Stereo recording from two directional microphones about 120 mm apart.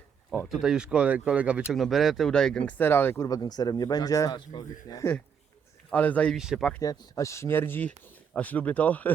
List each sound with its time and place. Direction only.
0.3 s speech: centre (ahead or behind); by 3.2 s 20° left (ahead or behind)
3.2 s a man's voice: 30° left (ahead or behind)
5.9 s speech: 15° left (ahead or behind)
6.3 s speech: 5° right (ahead or behind)
6.8 s speech: 35° left (ahead or behind); by 9.1 s 10° left (ahead or behind)